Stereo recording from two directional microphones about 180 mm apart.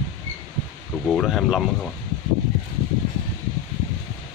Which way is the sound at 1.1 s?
Centre (ahead or behind).